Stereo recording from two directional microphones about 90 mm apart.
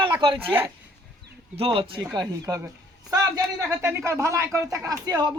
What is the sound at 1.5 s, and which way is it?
Speech, 80° right.